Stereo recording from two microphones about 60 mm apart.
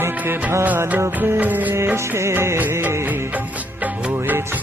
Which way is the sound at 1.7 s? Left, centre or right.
Right.